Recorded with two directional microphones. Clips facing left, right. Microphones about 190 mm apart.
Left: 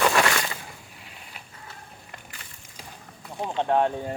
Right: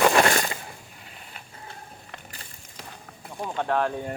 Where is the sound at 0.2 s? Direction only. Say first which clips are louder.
Right 3 dB; 40° right (ahead or behind).